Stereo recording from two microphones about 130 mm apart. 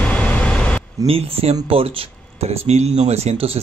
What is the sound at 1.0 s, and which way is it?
Speech, 50° right (ahead or behind).